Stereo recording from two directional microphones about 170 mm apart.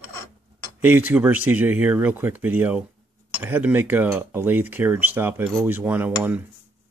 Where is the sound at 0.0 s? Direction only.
15° left (ahead or behind).